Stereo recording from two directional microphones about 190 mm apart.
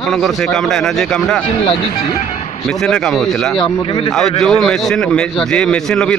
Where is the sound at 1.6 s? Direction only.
30° left (ahead or behind).